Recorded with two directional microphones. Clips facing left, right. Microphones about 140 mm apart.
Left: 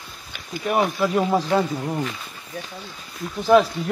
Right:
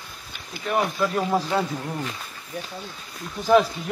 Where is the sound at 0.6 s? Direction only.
20° left (ahead or behind).